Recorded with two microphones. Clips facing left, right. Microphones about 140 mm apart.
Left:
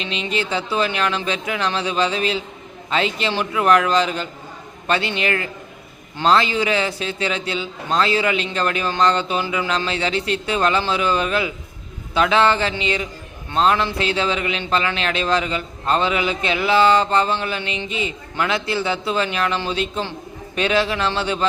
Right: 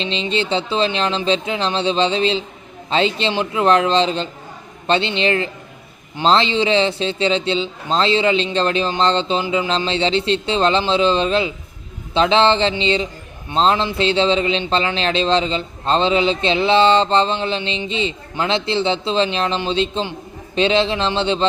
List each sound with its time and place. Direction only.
0.0 s a man's voice: 30° right (ahead or behind)